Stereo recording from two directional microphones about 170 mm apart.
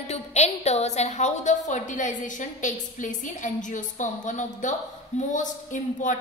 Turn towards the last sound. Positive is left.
turn(degrees=50)  # may be behind; listen again after turning